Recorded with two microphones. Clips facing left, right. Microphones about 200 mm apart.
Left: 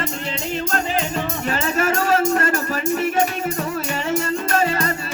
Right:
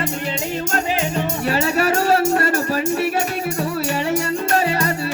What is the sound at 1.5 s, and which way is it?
Music, 40° right (ahead or behind).